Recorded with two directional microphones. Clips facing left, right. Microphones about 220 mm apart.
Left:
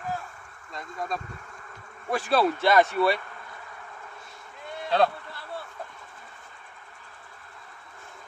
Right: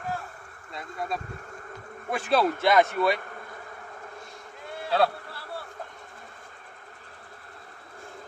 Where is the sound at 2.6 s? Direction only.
15° right (ahead or behind).